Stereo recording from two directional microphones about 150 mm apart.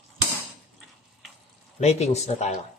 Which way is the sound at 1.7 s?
45° left (ahead or behind).